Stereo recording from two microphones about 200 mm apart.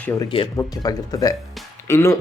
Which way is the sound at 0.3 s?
20° left (ahead or behind).